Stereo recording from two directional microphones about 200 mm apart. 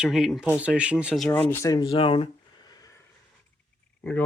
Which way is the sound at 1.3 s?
10° left (ahead or behind).